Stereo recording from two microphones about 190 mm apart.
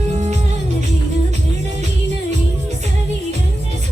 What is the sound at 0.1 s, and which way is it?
Music, 35° right (ahead or behind).